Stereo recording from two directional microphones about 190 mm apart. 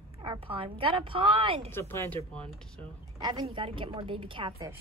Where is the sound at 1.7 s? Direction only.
10° left (ahead or behind).